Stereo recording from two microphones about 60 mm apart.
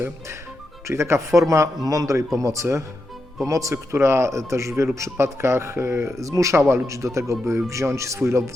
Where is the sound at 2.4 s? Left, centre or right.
Right.